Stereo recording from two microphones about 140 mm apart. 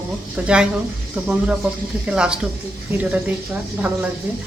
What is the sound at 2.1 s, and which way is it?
Speech, 5° right (ahead or behind).